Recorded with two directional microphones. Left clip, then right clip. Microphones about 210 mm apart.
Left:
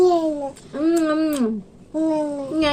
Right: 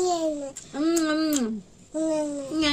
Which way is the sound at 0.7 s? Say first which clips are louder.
Left 5 dB; 30° right (ahead or behind).